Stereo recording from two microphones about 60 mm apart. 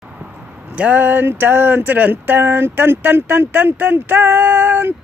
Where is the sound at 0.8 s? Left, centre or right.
Right.